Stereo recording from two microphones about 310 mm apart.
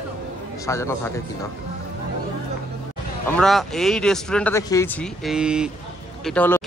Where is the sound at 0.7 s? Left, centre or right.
Centre.